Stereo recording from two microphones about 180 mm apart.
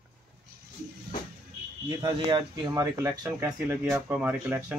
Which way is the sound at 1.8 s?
25° right (ahead or behind).